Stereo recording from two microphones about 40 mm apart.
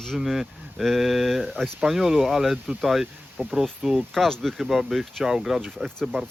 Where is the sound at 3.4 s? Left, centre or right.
Right.